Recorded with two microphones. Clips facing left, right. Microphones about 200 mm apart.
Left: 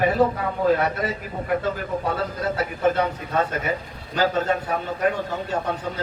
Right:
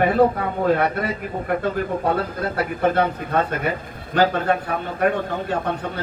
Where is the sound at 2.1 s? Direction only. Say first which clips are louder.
Right 2 dB; 55° right (ahead or behind).